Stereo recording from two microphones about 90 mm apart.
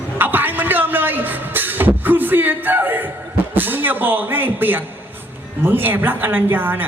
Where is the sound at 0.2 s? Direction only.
20° right (ahead or behind).